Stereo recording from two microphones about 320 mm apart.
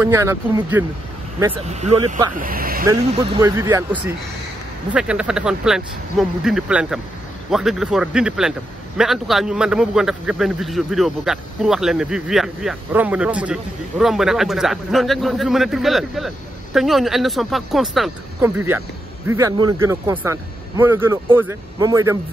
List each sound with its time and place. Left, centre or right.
0.0 s speech: centre
1.7 s speech: right
2.9 s a man's voice: centre